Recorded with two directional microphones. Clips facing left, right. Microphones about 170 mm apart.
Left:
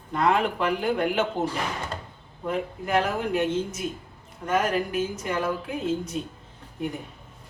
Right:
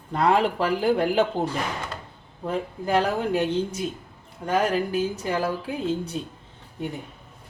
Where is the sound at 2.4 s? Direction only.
35° right (ahead or behind).